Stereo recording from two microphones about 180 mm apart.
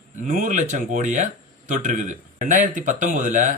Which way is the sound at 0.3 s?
45° right (ahead or behind).